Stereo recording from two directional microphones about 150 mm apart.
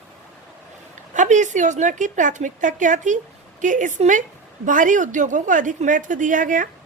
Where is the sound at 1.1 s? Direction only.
55° right (ahead or behind).